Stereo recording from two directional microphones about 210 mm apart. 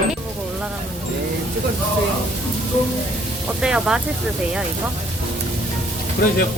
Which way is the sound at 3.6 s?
5° right (ahead or behind).